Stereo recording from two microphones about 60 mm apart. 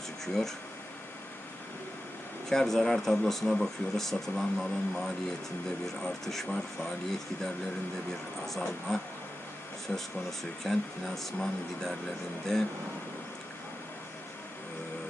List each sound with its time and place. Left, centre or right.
2.5 s speech: centre
9.9 s speech: centre
10.6 s speech: centre